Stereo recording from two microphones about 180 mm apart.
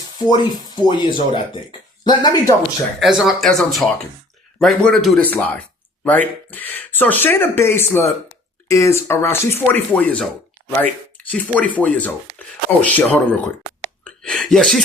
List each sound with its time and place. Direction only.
0.3 s speech: 25° left (ahead or behind)
3.0 s speech: centre (ahead or behind)